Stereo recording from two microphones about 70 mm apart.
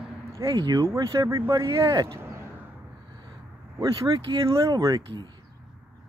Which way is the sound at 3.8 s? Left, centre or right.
Right.